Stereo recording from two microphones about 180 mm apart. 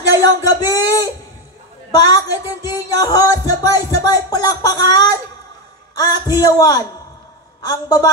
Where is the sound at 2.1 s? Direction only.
20° left (ahead or behind).